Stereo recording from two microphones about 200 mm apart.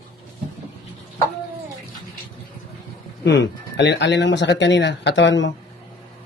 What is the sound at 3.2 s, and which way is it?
Speech, 60° left (ahead or behind).